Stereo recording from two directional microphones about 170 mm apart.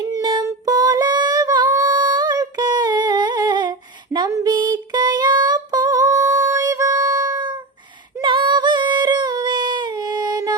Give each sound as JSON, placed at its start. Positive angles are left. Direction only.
{"t": 0.1, "sound": "female singing", "side_deg": -25}